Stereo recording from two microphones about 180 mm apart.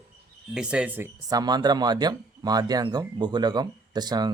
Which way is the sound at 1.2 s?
20° right (ahead or behind).